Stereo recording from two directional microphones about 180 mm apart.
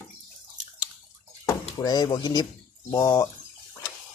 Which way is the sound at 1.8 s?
20° left (ahead or behind).